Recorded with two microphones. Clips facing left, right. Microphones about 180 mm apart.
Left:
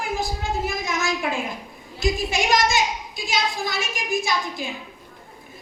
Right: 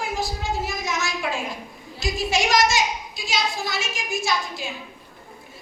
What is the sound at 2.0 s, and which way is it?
A woman's voice, 55° left (ahead or behind).